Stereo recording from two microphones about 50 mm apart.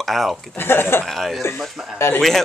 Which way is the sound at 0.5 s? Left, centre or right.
Left.